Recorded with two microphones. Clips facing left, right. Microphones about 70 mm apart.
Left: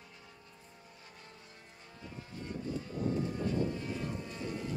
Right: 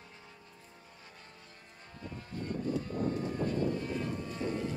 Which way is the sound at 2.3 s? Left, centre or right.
Right.